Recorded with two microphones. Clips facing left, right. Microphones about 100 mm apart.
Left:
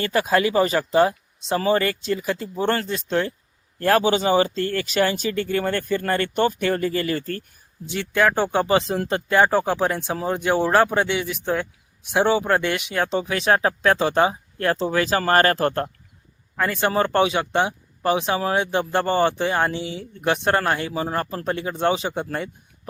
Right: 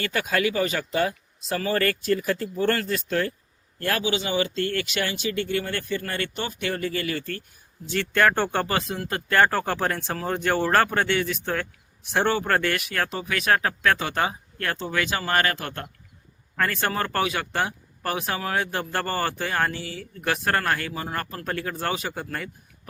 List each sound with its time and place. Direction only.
0.0 s speech: 30° left (ahead or behind)
3.8 s speech: 35° left (ahead or behind)
7.9 s speech: 10° left (ahead or behind); by 9.2 s 30° left (ahead or behind)
9.3 s speech: 15° left (ahead or behind)
13.1 s speech: 30° left (ahead or behind)
16.6 s speech: 15° left (ahead or behind)